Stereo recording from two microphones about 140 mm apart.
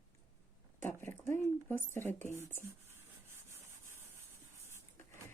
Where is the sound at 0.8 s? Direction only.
15° left (ahead or behind).